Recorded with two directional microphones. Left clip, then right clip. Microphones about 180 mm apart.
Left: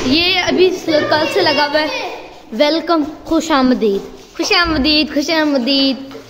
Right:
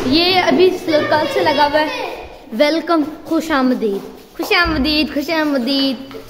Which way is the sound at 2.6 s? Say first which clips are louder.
Left 1 dB; centre (ahead or behind).